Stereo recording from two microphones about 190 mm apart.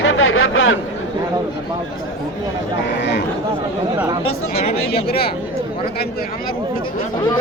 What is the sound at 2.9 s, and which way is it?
Speech, 65° left (ahead or behind).